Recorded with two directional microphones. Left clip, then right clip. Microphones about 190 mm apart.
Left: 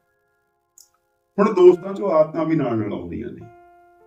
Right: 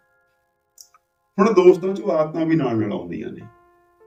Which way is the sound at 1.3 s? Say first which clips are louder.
Even; 15° left (ahead or behind).